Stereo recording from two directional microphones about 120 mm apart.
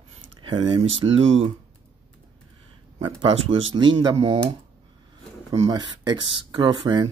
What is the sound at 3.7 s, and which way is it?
Speech, 40° right (ahead or behind).